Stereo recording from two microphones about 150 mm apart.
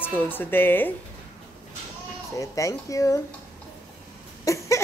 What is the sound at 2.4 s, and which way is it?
Speech, 20° left (ahead or behind).